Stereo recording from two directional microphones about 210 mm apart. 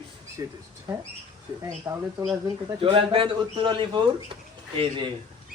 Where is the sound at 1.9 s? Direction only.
15° right (ahead or behind).